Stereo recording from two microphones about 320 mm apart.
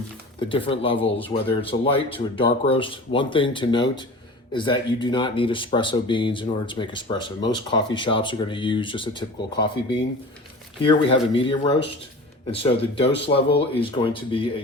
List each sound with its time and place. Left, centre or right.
0.3 s speech: centre
12.5 s speech: centre
13.1 s speech: left
13.3 s speech: centre